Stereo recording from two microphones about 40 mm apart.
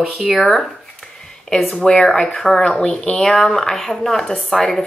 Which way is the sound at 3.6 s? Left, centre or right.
Centre.